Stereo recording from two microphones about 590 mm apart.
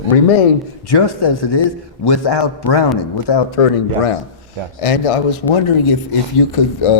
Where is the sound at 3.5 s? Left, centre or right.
Left.